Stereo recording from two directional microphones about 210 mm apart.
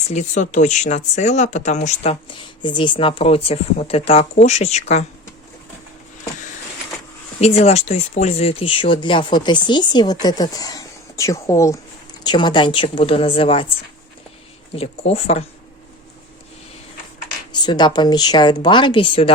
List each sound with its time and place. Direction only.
0.1 s speech: 35° left (ahead or behind)
7.3 s speech: 30° left (ahead or behind)
14.7 s speech: 30° left (ahead or behind)
17.5 s speech: 20° left (ahead or behind)